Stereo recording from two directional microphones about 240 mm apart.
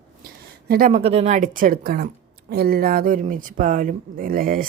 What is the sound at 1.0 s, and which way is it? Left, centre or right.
Speech, right.